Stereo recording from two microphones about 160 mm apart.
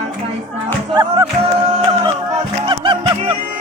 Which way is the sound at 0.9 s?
25° right (ahead or behind).